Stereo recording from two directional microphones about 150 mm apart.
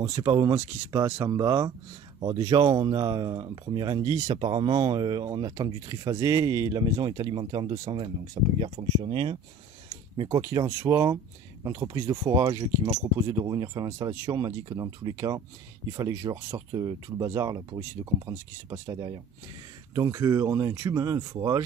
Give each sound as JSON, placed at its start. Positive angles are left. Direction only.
{"t": 0.0, "sound": "speech", "side_deg": -20}